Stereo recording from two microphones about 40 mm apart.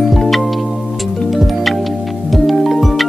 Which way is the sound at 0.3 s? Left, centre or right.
Centre.